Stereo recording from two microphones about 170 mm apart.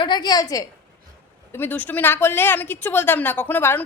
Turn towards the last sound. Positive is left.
turn(degrees=10)  # may be behind; listen again after turning